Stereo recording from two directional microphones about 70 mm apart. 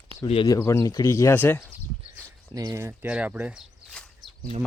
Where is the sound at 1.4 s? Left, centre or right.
Left.